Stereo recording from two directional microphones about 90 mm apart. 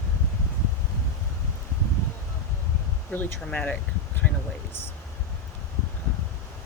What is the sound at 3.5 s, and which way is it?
Speech, 15° left (ahead or behind).